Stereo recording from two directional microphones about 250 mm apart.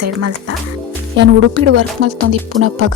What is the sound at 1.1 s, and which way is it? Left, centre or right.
Music, right.